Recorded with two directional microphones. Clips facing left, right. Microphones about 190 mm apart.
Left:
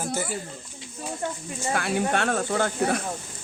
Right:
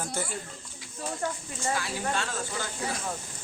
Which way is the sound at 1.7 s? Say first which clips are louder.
Left 6 dB; 60° left (ahead or behind).